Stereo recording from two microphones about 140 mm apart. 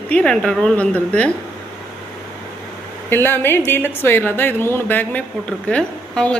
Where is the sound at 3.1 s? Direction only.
15° left (ahead or behind).